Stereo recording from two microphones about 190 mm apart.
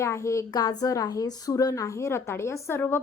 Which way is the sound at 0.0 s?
15° left (ahead or behind).